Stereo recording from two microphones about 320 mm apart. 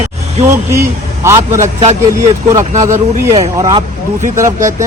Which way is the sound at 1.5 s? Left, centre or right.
Right.